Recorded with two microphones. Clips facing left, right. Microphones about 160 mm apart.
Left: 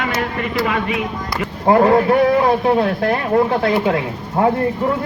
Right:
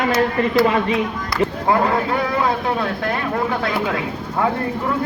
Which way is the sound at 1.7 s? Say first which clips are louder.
Left 8 dB; 40° left (ahead or behind).